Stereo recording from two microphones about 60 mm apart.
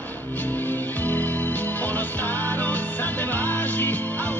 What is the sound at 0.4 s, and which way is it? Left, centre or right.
Music, left.